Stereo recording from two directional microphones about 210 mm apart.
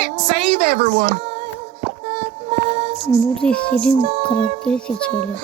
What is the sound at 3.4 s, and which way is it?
Music, 5° left (ahead or behind).